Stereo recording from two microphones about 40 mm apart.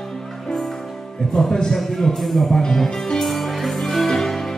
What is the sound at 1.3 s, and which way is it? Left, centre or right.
Speech, centre.